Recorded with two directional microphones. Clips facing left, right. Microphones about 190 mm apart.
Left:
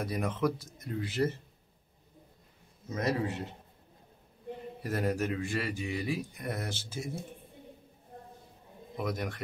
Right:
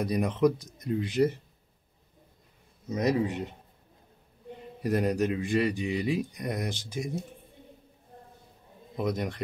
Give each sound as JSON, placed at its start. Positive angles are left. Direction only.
{"t": 0.0, "sound": "speech", "side_deg": -20}
{"t": 2.9, "sound": "speech", "side_deg": -15}
{"t": 4.8, "sound": "speech", "side_deg": -20}
{"t": 8.9, "sound": "speech", "side_deg": -20}